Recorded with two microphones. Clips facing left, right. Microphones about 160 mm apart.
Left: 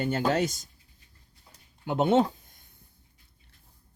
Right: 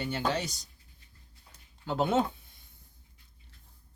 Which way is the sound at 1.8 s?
25° left (ahead or behind).